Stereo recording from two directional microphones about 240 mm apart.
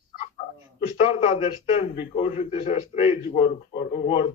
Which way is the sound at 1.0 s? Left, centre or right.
Left.